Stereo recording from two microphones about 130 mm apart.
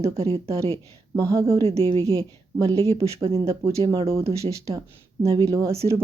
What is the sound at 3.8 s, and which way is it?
Speech, 45° right (ahead or behind).